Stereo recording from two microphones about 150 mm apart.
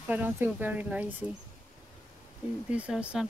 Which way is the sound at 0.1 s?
10° right (ahead or behind).